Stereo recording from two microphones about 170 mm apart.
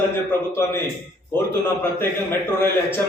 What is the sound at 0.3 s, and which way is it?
Speech, 15° left (ahead or behind).